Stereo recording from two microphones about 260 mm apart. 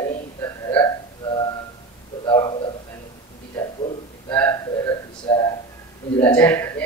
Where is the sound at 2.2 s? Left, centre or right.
Centre.